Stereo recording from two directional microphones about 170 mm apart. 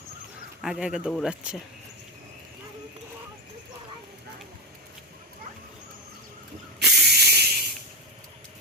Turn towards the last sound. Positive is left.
turn(degrees=-70)  # may be behind; listen again after turning